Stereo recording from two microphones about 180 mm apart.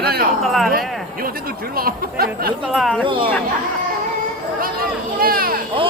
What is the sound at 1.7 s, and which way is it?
Speech, 55° right (ahead or behind).